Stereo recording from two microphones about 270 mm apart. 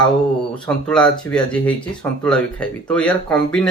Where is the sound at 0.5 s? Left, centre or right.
Centre.